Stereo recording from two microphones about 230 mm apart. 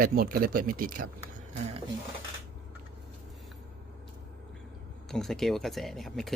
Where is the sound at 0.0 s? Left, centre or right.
Right.